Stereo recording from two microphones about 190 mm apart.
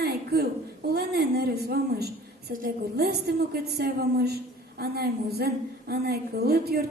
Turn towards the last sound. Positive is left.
turn(degrees=-55)  # may be behind; listen again after turning